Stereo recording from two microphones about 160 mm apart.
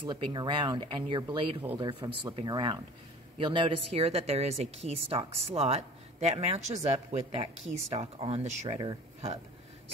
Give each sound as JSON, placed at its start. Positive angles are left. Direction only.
{"t": 0.0, "sound": "speech", "side_deg": -30}
{"t": 8.7, "sound": "speech", "side_deg": -30}